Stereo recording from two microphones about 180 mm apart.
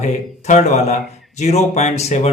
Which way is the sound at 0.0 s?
40° left (ahead or behind).